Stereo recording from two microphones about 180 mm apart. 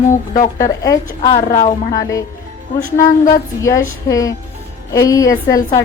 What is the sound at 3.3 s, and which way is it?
A woman's voice, 15° left (ahead or behind).